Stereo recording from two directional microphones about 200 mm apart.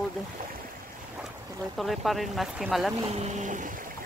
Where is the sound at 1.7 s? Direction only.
Centre (ahead or behind).